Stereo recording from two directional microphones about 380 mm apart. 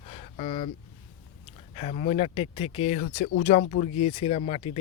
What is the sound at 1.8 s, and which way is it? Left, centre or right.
Speech, centre.